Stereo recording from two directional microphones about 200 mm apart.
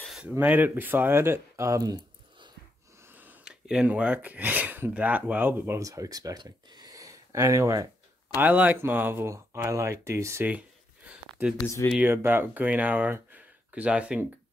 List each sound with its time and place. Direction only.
0.0 s speech: 5° right (ahead or behind); by 2.5 s 20° right (ahead or behind)
3.0 s speech: 10° right (ahead or behind)
11.1 s a sound: 5° right (ahead or behind)
11.6 s speech: 15° left (ahead or behind)
11.9 s speech: 10° right (ahead or behind)